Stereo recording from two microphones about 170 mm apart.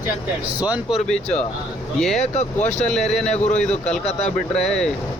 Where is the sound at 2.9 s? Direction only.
Centre (ahead or behind).